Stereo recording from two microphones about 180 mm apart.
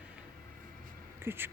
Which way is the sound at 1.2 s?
10° right (ahead or behind).